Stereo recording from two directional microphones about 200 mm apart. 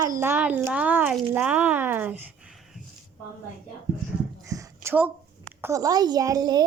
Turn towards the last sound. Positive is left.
turn(degrees=-20)  # may be behind; listen again after turning